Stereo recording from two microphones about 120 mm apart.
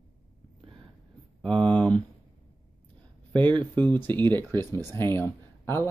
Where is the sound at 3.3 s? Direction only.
40° right (ahead or behind).